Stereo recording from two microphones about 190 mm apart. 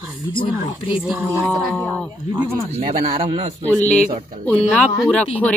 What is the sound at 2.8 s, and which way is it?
Speech, 45° right (ahead or behind).